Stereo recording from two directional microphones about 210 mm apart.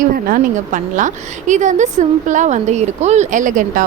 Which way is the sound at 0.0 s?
40° right (ahead or behind).